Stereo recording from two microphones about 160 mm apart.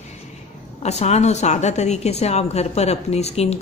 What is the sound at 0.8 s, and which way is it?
A woman's voice, 45° left (ahead or behind).